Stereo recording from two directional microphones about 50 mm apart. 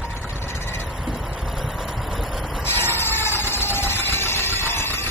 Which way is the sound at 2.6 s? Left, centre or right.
Left.